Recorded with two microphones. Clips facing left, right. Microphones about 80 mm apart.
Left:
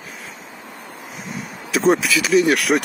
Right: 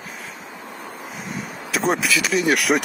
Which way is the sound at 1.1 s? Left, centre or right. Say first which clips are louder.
Left 1 dB; centre.